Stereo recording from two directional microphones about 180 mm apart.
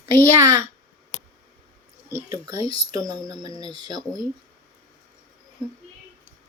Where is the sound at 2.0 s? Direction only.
15° right (ahead or behind).